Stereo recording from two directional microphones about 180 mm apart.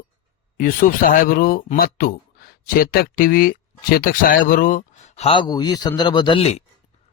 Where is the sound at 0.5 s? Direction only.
50° left (ahead or behind).